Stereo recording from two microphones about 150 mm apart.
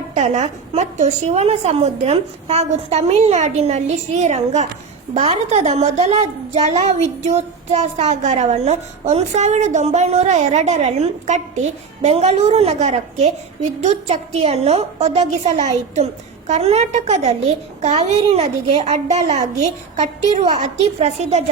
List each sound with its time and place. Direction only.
0.1 s a woman's voice: 50° right (ahead or behind)